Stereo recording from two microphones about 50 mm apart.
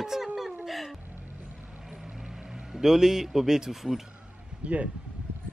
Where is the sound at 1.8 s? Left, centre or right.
Centre.